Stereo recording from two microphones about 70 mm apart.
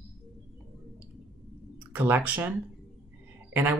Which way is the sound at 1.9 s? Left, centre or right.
Right.